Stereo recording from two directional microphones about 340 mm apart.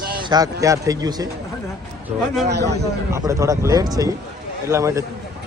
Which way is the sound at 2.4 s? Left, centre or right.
Right.